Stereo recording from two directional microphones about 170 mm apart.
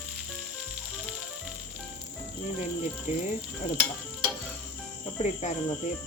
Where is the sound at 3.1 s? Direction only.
45° left (ahead or behind).